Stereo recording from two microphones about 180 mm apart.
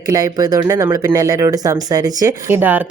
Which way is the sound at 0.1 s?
20° right (ahead or behind).